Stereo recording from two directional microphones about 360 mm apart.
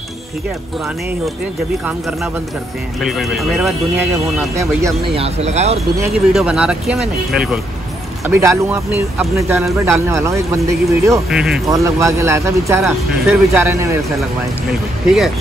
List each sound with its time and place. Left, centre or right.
3.0 s speech: centre
6.3 s speech: centre